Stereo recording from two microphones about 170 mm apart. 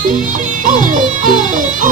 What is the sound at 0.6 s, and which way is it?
Music, 50° right (ahead or behind).